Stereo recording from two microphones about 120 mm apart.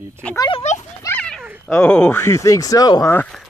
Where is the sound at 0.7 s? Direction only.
70° left (ahead or behind).